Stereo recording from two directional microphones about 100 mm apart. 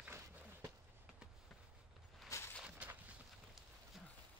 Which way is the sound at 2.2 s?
30° left (ahead or behind).